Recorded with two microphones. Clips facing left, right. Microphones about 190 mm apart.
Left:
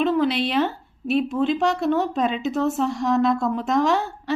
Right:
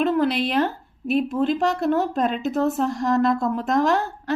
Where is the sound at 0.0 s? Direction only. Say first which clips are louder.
Even; centre (ahead or behind).